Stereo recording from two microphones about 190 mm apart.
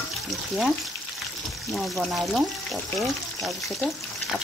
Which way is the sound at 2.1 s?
Centre (ahead or behind).